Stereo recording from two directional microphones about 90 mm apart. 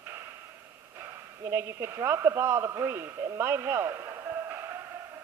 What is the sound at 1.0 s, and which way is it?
A man's voice, 30° right (ahead or behind).